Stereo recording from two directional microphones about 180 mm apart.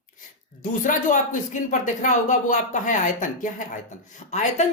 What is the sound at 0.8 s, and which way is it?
Speech, 45° left (ahead or behind).